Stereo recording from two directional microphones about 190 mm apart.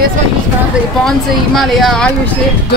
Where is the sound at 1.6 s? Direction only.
Centre (ahead or behind).